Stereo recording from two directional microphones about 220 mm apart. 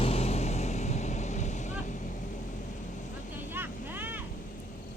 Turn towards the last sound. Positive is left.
turn(degrees=-10)  # may be behind; listen again after turning